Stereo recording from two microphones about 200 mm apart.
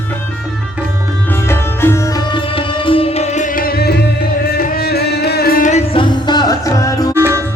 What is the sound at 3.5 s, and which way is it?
Music, 50° left (ahead or behind).